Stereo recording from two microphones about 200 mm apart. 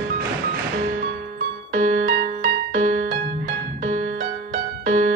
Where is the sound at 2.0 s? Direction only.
60° right (ahead or behind).